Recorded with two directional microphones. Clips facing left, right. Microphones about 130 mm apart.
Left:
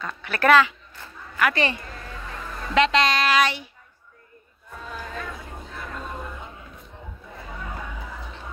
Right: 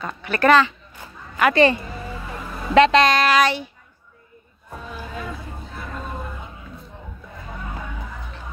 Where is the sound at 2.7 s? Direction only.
45° right (ahead or behind).